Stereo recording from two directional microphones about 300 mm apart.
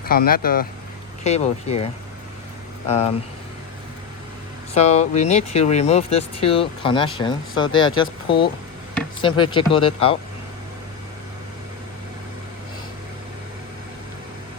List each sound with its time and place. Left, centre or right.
0.0 s speech: left
4.7 s speech: left
9.2 s speech: centre